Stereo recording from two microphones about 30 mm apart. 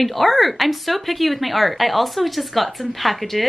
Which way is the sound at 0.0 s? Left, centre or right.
Centre.